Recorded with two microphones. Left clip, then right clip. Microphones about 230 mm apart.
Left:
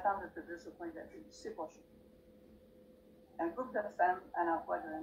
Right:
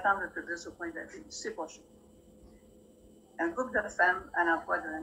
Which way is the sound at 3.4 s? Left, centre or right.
Right.